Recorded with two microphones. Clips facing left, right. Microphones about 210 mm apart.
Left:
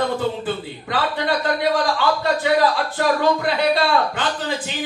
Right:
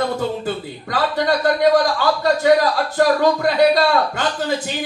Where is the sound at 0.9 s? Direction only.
40° right (ahead or behind).